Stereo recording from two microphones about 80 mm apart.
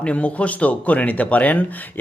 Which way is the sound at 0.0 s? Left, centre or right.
Centre.